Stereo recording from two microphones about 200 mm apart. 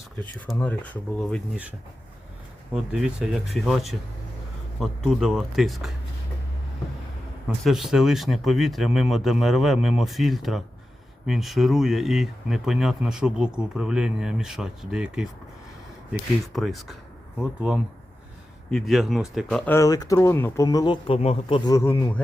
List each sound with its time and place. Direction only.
0.2 s speech: 5° left (ahead or behind)
2.7 s speech: centre (ahead or behind)
7.6 s speech: centre (ahead or behind)
16.5 s speech: centre (ahead or behind)
19.7 s speech: 15° left (ahead or behind)